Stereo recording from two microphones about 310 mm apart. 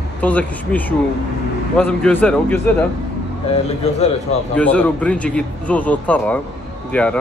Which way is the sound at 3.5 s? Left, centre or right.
Left.